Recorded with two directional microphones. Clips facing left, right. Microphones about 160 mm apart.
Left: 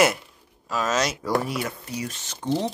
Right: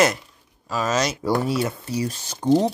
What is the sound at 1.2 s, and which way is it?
Speech, 30° right (ahead or behind).